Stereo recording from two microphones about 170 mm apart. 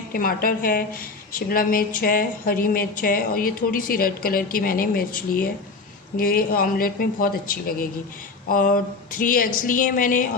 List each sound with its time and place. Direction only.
0.1 s a woman's voice: 55° left (ahead or behind)